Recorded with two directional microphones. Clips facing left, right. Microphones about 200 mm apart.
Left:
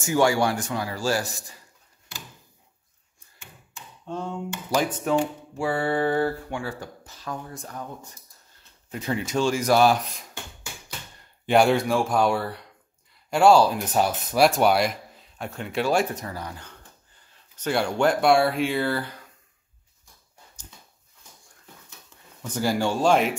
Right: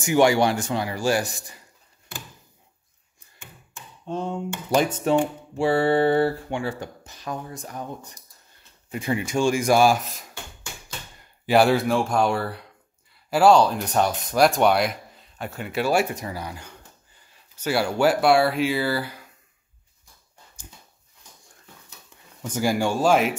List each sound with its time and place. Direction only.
0.0 s speech: 20° right (ahead or behind)
4.0 s a sound: 20° right (ahead or behind)
4.6 s speech: 25° right (ahead or behind); by 10.2 s 5° right (ahead or behind)
11.4 s speech: 5° right (ahead or behind)
22.4 s speech: 10° right (ahead or behind)